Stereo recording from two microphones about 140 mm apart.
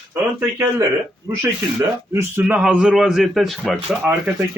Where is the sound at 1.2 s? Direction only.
20° right (ahead or behind).